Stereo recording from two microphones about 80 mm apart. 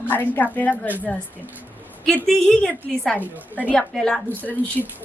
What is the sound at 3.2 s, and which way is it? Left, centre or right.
Speech, right.